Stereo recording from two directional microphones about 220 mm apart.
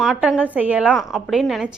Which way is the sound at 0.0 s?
Centre (ahead or behind).